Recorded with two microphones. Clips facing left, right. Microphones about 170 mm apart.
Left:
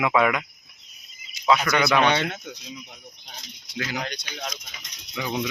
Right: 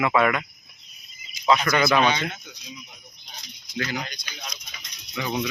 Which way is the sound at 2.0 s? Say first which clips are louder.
Left 2 dB; 65° left (ahead or behind).